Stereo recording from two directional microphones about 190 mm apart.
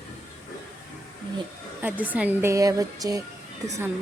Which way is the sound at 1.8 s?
10° right (ahead or behind).